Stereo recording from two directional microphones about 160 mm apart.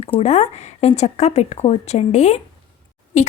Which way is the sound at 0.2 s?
40° left (ahead or behind).